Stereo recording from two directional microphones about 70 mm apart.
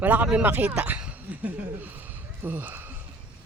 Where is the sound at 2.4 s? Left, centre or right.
Right.